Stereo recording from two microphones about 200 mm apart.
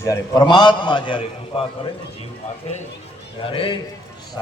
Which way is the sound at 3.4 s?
25° left (ahead or behind).